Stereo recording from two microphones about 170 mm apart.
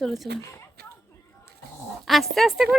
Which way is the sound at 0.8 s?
65° right (ahead or behind).